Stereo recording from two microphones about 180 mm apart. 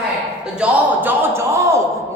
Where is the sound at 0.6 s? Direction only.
10° right (ahead or behind).